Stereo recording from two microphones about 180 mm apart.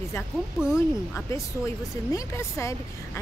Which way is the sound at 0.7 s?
15° left (ahead or behind).